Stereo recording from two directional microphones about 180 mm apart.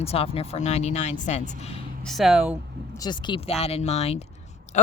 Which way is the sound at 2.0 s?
Centre (ahead or behind).